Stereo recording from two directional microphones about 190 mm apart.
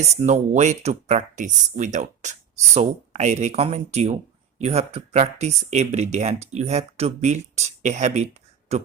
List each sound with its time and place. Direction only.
0.2 s speech: 35° right (ahead or behind)